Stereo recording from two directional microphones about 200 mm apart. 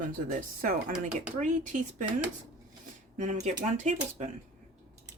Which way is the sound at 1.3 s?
40° right (ahead or behind).